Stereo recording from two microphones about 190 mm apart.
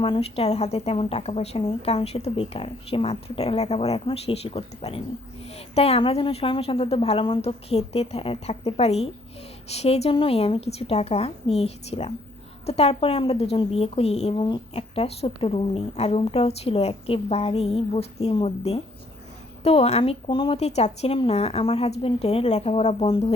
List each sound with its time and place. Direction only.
0.0 s a woman's voice: 30° left (ahead or behind)